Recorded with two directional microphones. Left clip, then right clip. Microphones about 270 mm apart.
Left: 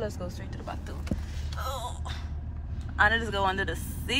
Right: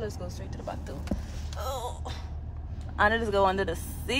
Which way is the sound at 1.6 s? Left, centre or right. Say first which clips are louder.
Right 1 dB; right.